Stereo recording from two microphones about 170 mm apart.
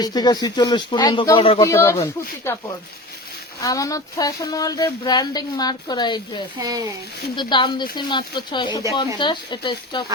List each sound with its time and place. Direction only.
0.0 s speech: 25° left (ahead or behind)
1.6 s speech: 15° left (ahead or behind)
6.6 s speech: 20° right (ahead or behind)
7.3 s speech: 25° left (ahead or behind)